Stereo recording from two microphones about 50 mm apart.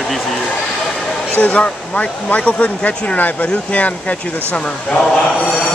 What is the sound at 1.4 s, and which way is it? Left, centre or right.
Speech, left.